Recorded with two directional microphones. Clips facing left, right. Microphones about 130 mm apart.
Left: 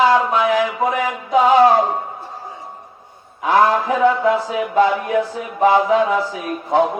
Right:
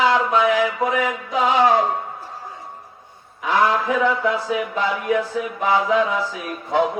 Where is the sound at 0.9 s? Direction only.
40° left (ahead or behind).